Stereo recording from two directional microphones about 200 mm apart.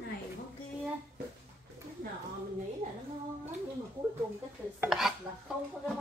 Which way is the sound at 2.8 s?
40° right (ahead or behind).